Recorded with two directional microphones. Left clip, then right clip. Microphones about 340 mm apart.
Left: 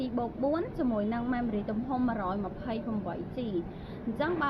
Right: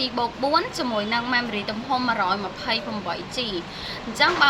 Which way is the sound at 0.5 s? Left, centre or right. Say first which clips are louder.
Right 9 dB; centre.